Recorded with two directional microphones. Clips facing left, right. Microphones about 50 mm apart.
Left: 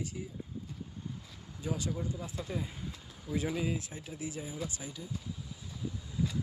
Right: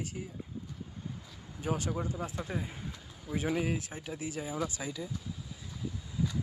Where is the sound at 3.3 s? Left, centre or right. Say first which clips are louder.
Right 1 dB; right.